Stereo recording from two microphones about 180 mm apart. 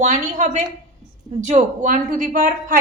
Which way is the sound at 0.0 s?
40° right (ahead or behind).